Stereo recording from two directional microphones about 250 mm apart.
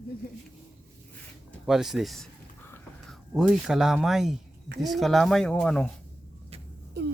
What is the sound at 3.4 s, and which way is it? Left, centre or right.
Speech, centre.